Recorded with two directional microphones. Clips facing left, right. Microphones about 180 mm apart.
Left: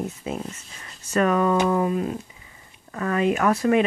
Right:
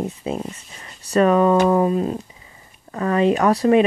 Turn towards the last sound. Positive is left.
turn(degrees=-35)  # may be behind; listen again after turning